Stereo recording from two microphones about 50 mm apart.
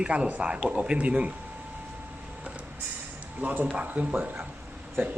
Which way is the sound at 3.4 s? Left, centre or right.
Right.